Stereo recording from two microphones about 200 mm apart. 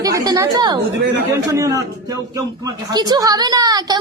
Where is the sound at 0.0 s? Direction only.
15° right (ahead or behind).